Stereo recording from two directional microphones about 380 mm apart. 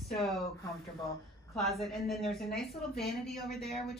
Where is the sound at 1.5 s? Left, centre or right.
Centre.